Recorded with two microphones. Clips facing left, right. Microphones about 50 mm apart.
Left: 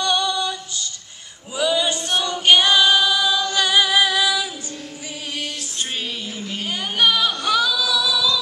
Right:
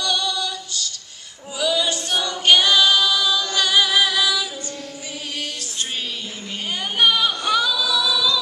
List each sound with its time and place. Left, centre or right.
0.0 s female singing: left
1.6 s choir: left
2.4 s singing: centre
7.0 s singing: centre